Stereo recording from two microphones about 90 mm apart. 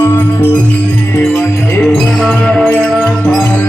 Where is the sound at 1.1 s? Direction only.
30° left (ahead or behind).